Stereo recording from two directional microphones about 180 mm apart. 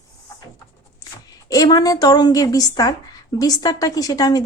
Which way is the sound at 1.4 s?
20° left (ahead or behind).